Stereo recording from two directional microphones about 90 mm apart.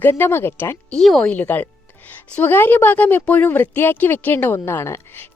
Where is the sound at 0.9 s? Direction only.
5° left (ahead or behind).